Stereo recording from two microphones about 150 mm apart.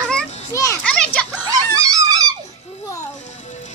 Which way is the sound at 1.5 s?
25° right (ahead or behind).